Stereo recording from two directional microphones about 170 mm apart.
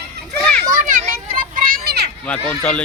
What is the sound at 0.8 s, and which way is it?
Children playing, 55° right (ahead or behind).